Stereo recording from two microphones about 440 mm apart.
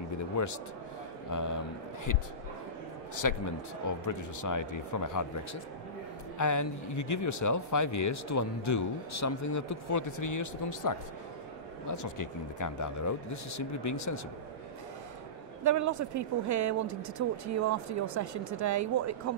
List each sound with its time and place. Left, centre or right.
0.4 s speech: left
3.2 s speech: left
15.6 s speech: right